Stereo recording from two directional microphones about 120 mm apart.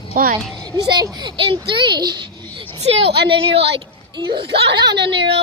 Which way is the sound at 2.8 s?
55° right (ahead or behind).